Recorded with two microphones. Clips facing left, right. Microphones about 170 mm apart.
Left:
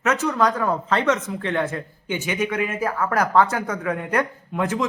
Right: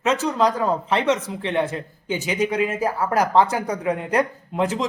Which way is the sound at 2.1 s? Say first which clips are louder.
Right 1 dB; 35° right (ahead or behind).